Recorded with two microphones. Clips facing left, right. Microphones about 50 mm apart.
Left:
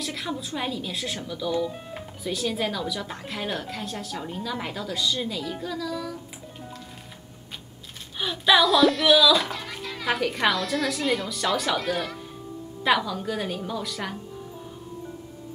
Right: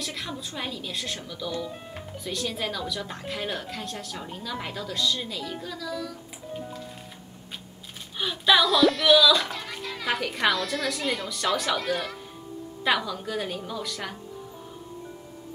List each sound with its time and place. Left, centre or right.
0.0 s speech: centre
8.2 s speech: centre